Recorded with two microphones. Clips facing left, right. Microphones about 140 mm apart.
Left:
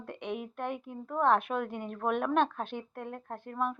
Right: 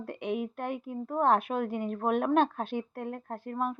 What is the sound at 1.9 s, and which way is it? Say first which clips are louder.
Speech: right 2 dB; 45° right (ahead or behind).